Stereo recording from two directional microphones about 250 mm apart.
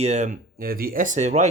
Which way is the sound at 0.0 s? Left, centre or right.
Right.